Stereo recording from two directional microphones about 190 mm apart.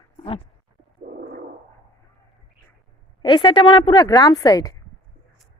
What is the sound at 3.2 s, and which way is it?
A woman's voice, 25° left (ahead or behind).